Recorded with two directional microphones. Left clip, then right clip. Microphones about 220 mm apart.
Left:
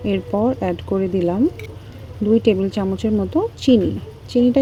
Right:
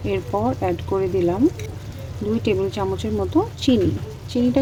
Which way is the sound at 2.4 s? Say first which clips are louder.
Left 3 dB; 25° left (ahead or behind).